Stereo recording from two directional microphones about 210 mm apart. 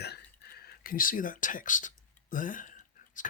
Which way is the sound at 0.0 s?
50° left (ahead or behind).